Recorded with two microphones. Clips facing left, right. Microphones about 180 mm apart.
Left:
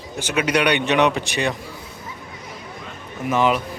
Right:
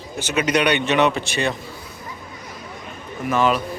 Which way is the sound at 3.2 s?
15° left (ahead or behind).